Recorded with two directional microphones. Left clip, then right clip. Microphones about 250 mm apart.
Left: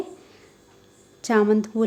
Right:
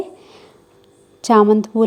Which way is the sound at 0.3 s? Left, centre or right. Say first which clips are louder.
Right 7 dB; right.